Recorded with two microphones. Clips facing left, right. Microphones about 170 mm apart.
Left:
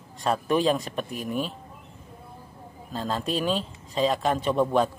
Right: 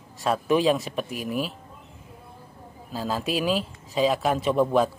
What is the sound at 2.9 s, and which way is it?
Speech, 5° right (ahead or behind).